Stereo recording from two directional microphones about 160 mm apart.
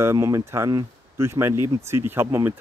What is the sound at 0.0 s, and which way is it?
Speech, 20° right (ahead or behind).